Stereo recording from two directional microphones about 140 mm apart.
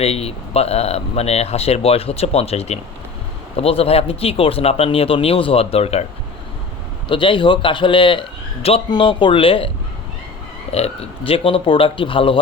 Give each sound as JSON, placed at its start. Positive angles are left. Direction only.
{"t": 0.0, "sound": "speech", "side_deg": 45}
{"t": 7.1, "sound": "a man's voice", "side_deg": 35}